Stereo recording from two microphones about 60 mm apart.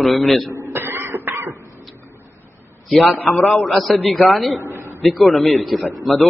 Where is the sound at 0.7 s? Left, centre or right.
Right.